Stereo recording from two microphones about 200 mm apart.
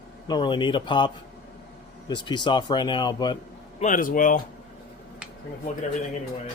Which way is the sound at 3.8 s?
40° left (ahead or behind).